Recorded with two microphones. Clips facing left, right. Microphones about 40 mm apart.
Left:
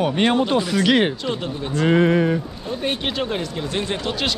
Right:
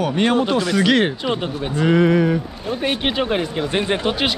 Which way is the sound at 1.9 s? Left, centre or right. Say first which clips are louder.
Right 1 dB; left.